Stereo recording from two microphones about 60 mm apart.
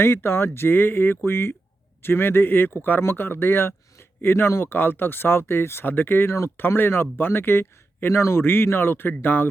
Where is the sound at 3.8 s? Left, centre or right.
Left.